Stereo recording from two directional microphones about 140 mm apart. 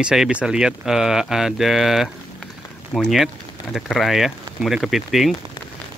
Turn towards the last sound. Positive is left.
turn(degrees=0)  # may be behind; listen again after turning